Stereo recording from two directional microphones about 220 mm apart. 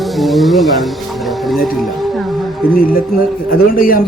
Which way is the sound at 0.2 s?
Centre (ahead or behind).